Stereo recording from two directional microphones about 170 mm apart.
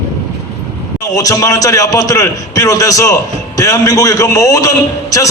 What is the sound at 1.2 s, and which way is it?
A man's voice, 20° left (ahead or behind).